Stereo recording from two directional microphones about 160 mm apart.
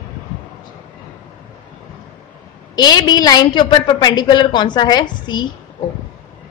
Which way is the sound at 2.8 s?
25° left (ahead or behind).